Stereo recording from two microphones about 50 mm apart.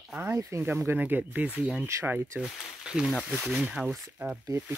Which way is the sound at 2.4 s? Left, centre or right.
Centre.